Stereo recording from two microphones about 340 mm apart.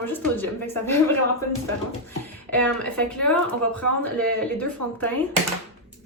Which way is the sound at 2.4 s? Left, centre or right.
Centre.